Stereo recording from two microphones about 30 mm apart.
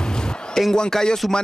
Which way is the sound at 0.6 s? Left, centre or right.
Centre.